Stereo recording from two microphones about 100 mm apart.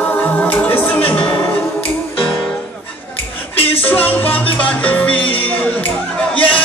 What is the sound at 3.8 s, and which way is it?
Music, 20° left (ahead or behind).